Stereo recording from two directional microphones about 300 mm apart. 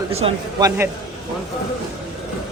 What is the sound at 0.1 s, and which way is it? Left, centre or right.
Speech, centre.